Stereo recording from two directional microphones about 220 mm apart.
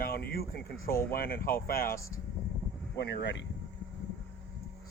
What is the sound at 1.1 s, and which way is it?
Speech, 40° left (ahead or behind).